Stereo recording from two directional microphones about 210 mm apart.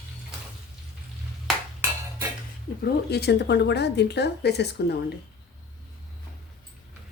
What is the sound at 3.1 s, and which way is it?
Speech, 50° left (ahead or behind).